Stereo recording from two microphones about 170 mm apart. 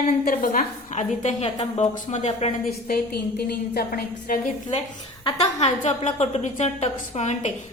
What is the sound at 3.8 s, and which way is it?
Speech, 60° left (ahead or behind).